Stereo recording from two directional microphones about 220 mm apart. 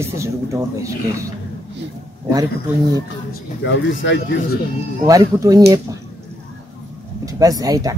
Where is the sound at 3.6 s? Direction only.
55° left (ahead or behind).